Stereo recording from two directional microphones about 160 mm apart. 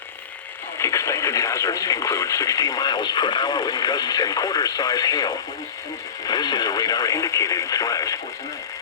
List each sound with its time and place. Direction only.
0.8 s speech: 20° left (ahead or behind)